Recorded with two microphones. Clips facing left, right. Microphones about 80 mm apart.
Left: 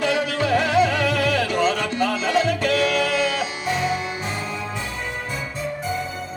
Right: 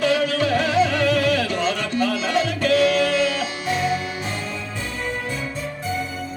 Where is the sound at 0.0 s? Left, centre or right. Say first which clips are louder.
Right 2 dB; centre.